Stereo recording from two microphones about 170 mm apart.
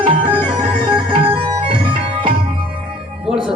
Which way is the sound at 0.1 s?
30° right (ahead or behind).